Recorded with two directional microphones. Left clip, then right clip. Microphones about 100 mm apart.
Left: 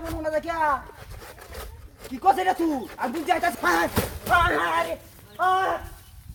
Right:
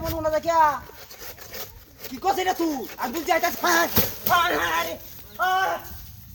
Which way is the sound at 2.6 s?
20° right (ahead or behind).